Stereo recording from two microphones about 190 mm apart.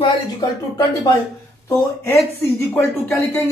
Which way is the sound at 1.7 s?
15° left (ahead or behind).